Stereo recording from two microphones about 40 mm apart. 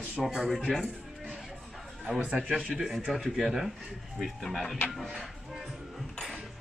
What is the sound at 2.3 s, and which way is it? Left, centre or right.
Speech, right.